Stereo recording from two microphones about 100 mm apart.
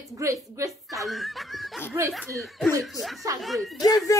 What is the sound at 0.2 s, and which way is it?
Speech, 30° right (ahead or behind).